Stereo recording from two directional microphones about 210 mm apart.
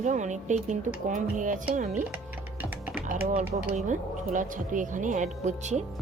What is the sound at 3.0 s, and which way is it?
Speech, 35° right (ahead or behind).